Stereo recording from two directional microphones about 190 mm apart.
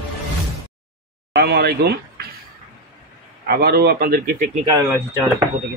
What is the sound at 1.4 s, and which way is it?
Speech, 55° right (ahead or behind).